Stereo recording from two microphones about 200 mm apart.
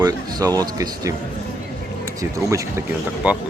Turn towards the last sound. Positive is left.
turn(degrees=-5)  # may be behind; listen again after turning